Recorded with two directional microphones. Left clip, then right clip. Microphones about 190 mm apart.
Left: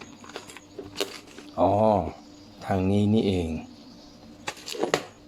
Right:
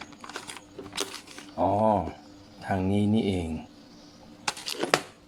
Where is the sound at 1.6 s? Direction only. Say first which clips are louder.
Left 3 dB; 15° left (ahead or behind).